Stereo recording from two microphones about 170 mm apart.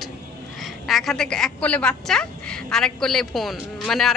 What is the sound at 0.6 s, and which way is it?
A woman's voice, centre (ahead or behind).